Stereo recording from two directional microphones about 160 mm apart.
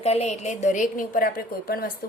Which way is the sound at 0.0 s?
40° left (ahead or behind).